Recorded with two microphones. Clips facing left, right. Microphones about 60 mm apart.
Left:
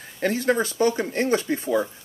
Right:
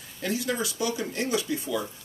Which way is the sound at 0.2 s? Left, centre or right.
Left.